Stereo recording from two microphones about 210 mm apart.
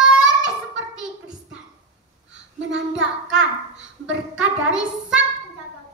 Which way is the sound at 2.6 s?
65° right (ahead or behind).